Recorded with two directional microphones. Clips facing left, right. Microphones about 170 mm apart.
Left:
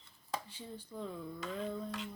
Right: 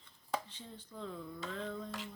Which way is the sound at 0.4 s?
10° left (ahead or behind).